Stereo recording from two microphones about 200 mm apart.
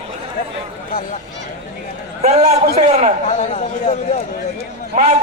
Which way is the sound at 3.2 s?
35° left (ahead or behind).